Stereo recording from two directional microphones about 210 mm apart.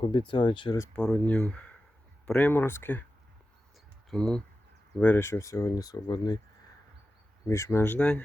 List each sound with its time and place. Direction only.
0.0 s speech: 25° left (ahead or behind)
0.9 s speech: 5° left (ahead or behind)
4.1 s speech: 5° left (ahead or behind); by 6.4 s 20° left (ahead or behind)
7.4 s speech: 15° left (ahead or behind)